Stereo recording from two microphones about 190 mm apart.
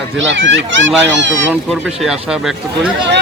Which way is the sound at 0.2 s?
75° right (ahead or behind).